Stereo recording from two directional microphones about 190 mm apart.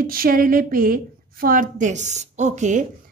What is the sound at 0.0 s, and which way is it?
A woman's voice, 50° right (ahead or behind).